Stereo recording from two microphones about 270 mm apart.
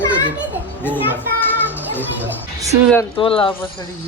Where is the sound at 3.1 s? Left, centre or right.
Centre.